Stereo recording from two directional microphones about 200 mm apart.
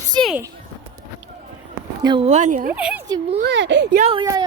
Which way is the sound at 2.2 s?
35° right (ahead or behind).